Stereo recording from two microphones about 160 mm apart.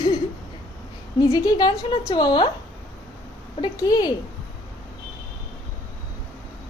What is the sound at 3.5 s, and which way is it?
Speech, 25° left (ahead or behind).